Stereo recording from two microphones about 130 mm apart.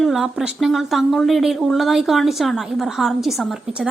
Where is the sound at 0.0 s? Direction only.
5° right (ahead or behind).